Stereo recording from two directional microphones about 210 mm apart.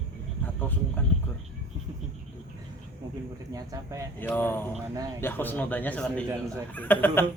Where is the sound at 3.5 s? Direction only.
15° right (ahead or behind).